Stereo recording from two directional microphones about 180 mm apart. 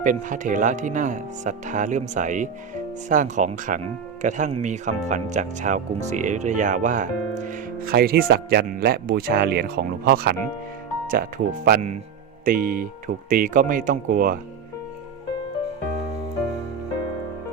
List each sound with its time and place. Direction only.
0.0 s speech: 45° right (ahead or behind)